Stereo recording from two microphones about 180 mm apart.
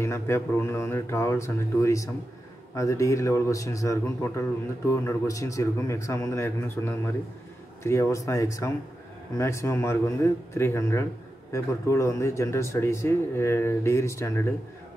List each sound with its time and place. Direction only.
0.0 s a man's voice: 15° left (ahead or behind)